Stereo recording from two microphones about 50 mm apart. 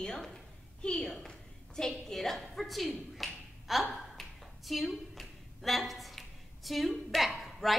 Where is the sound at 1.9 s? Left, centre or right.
Centre.